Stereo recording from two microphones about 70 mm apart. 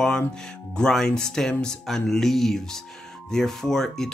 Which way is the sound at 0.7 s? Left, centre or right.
Centre.